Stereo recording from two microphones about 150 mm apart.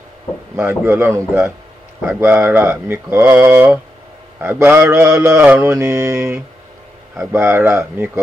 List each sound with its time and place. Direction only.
0.6 s mantra: 15° right (ahead or behind)